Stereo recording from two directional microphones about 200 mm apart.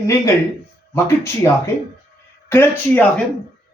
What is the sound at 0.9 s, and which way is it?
Speech, 15° left (ahead or behind).